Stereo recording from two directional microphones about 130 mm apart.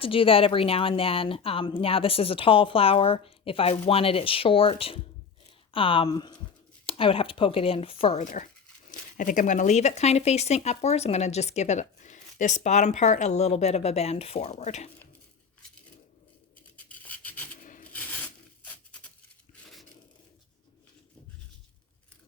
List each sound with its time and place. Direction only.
0.0 s a woman's voice: 45° left (ahead or behind)
6.8 s a woman's voice: 45° left (ahead or behind)
8.2 s speech: 70° left (ahead or behind)
8.9 s speech: 90° left; by 14.8 s 60° left (ahead or behind)
16.7 s filing: 10° left (ahead or behind)
17.6 s rub: 90° left
17.9 s a sound: 15° left (ahead or behind)